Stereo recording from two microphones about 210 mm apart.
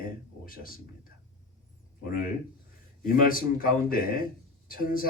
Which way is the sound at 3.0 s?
45° left (ahead or behind).